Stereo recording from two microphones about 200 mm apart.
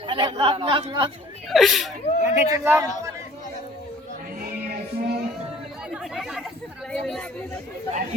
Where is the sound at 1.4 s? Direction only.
Centre (ahead or behind).